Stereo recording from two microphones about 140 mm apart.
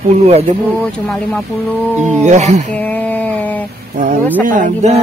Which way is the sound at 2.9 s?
10° left (ahead or behind).